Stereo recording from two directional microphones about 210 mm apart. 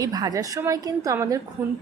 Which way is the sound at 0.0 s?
20° right (ahead or behind).